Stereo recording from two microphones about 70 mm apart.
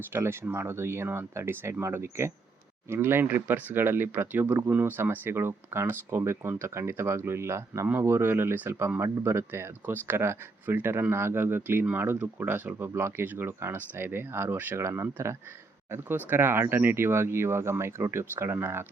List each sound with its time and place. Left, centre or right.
0.1 s speech: right
14.8 s speech: right
15.9 s speech: right